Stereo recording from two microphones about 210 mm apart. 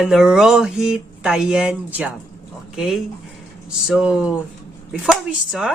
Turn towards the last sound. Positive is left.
turn(degrees=-5)  # may be behind; listen again after turning